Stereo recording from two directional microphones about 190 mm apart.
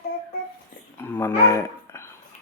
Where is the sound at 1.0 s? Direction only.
10° left (ahead or behind).